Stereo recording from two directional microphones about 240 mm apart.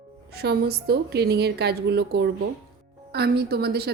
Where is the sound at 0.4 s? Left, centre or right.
Right.